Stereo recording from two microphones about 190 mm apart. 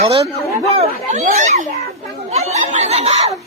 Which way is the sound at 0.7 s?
40° right (ahead or behind).